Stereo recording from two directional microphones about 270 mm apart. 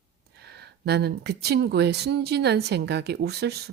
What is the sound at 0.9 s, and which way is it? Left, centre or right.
Speech, right.